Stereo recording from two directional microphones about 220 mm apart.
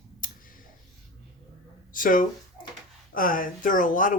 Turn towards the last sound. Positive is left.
turn(degrees=35)  # may be behind; listen again after turning